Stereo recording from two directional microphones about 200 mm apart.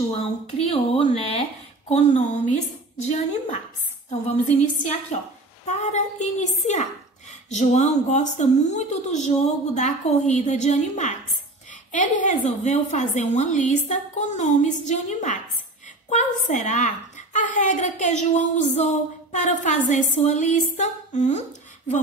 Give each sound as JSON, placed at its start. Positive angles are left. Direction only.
{"t": 0.6, "sound": "speech", "side_deg": 30}